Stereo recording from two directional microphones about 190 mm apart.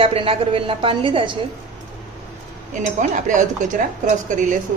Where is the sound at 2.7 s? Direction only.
40° right (ahead or behind).